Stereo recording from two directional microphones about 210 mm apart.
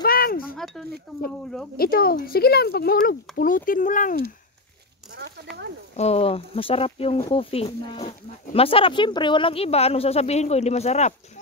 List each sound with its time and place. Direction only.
0.0 s chink: 45° left (ahead or behind)
1.1 s speech: centre (ahead or behind)
1.8 s speech: 45° left (ahead or behind)
5.9 s speech: 30° left (ahead or behind)